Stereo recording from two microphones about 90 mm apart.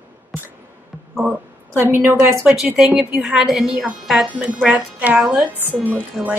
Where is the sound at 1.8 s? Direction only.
30° right (ahead or behind).